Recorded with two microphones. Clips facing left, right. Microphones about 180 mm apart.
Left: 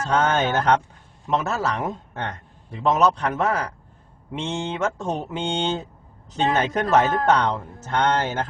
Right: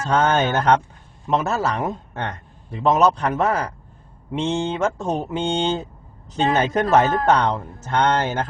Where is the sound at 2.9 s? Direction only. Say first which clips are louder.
Right 2 dB; 40° right (ahead or behind).